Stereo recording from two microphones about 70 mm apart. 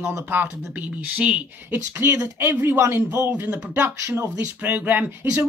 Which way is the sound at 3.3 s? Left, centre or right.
Right.